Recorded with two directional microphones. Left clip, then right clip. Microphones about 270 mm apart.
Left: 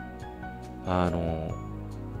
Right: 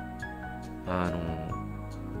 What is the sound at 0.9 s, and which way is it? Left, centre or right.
Speech, centre.